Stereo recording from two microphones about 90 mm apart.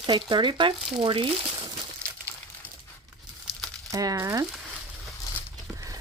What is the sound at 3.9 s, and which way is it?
Speech, 40° right (ahead or behind).